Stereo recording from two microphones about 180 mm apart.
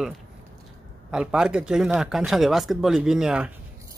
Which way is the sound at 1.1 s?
5° right (ahead or behind).